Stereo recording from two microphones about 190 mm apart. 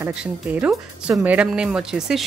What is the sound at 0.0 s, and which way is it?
Speech, 5° right (ahead or behind).